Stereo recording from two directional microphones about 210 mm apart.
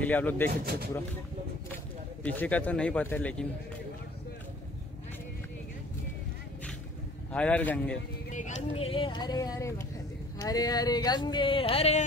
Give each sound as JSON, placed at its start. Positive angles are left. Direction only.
{"t": 0.0, "sound": "speech", "side_deg": 10}
{"t": 0.5, "sound": "speech", "side_deg": -45}
{"t": 2.2, "sound": "speech", "side_deg": 5}
{"t": 7.3, "sound": "speech", "side_deg": 5}
{"t": 8.3, "sound": "speech", "side_deg": 35}